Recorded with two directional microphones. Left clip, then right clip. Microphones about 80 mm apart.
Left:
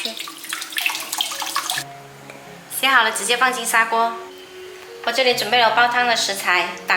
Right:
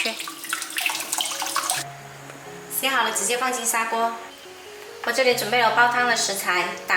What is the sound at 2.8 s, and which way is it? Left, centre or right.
A woman's voice, left.